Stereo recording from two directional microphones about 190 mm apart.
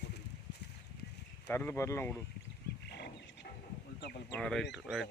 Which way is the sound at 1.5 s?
10° left (ahead or behind).